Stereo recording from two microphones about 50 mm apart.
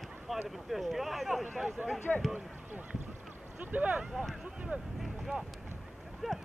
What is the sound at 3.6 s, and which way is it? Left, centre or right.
Speech, right.